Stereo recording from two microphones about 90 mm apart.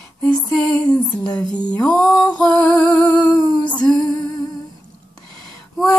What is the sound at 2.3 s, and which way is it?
Music, 15° left (ahead or behind).